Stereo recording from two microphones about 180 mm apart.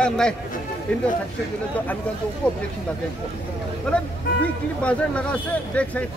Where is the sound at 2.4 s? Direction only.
5° left (ahead or behind).